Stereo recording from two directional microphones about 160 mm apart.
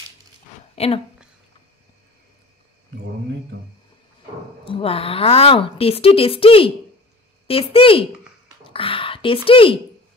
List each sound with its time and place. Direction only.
0.7 s a woman's voice: 35° left (ahead or behind)
4.6 s a woman's voice: 35° left (ahead or behind)